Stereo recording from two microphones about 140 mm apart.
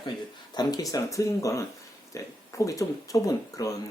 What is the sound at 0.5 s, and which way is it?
Speech, 25° left (ahead or behind).